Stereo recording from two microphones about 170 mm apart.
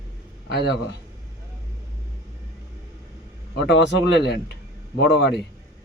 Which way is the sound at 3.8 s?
90° left.